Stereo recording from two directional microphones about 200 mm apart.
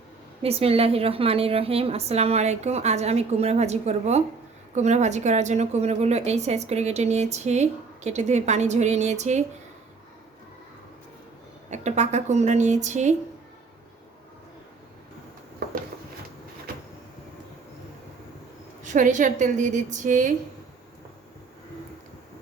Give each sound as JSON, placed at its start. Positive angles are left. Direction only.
{"t": 0.4, "sound": "a woman's voice", "side_deg": -30}
{"t": 11.7, "sound": "a woman's voice", "side_deg": -35}
{"t": 18.8, "sound": "a woman's voice", "side_deg": -40}